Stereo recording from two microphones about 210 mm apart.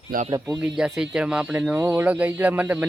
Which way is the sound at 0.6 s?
5° right (ahead or behind).